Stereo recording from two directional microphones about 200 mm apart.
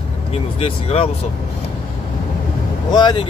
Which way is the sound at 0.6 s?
30° left (ahead or behind).